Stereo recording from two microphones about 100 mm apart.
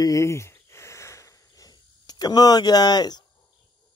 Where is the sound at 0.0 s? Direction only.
30° left (ahead or behind).